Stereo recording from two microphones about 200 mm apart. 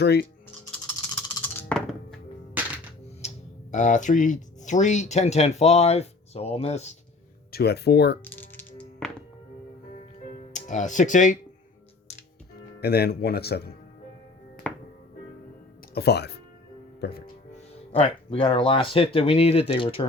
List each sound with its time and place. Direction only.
0.0 s speech: 55° left (ahead or behind)
0.9 s music: 5° left (ahead or behind)
3.2 s a sound: 35° left (ahead or behind)
4.6 s speech: 35° left (ahead or behind)
7.5 s speech: 55° left (ahead or behind)
8.2 s music: 10° left (ahead or behind)
10.5 s speech: 40° left (ahead or behind)
12.8 s speech: 50° left (ahead or behind)
14.6 s music: 5° left (ahead or behind)
16.0 s speech: 55° left (ahead or behind)
17.9 s speech: 30° left (ahead or behind)